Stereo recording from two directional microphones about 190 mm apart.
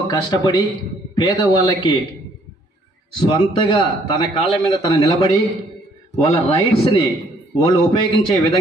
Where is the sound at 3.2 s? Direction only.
25° left (ahead or behind).